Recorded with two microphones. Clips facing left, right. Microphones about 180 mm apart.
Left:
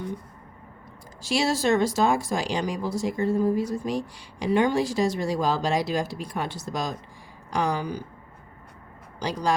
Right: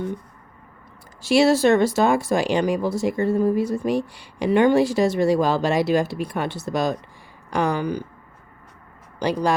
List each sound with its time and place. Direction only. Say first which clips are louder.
1.2 s speech: right 8 dB; 65° right (ahead or behind)
9.1 s speech: right 4 dB; 60° right (ahead or behind)